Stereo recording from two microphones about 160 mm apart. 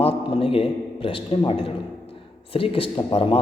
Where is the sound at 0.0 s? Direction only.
35° left (ahead or behind).